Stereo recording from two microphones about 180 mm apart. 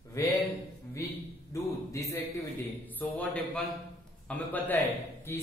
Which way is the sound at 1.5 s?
15° left (ahead or behind).